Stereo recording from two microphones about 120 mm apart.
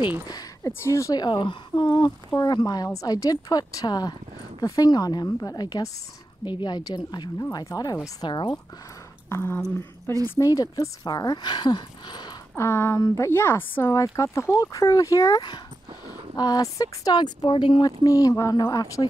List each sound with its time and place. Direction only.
0.3 s speech: 30° left (ahead or behind)
1.2 s speech: 40° left (ahead or behind)
9.3 s speech: 20° left (ahead or behind); by 12.4 s 35° left (ahead or behind)
12.5 s speech: 20° left (ahead or behind)